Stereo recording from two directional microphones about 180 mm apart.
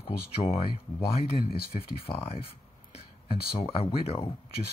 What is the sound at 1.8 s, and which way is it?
Speech, 35° left (ahead or behind).